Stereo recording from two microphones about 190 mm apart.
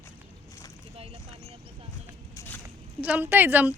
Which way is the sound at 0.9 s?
30° right (ahead or behind).